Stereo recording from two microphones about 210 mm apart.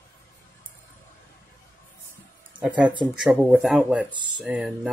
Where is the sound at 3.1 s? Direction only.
5° right (ahead or behind).